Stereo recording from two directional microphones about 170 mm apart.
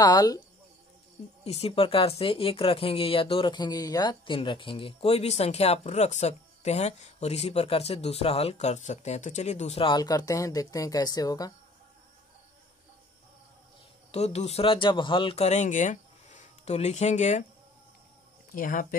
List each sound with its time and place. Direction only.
0.0 s speech: 20° left (ahead or behind)
1.4 s speech: 35° left (ahead or behind); by 11.5 s 20° left (ahead or behind)
14.1 s speech: 40° left (ahead or behind)
18.5 s speech: 55° left (ahead or behind)